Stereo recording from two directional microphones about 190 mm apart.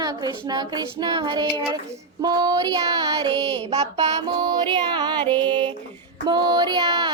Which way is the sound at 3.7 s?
30° right (ahead or behind).